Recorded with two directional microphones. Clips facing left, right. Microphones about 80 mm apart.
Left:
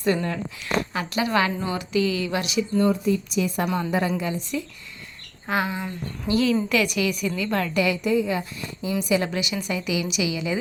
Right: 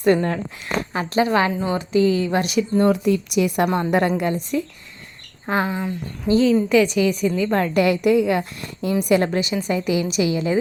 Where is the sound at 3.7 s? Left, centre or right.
Right.